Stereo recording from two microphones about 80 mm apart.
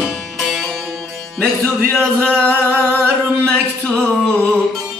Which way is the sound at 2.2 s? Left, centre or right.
Centre.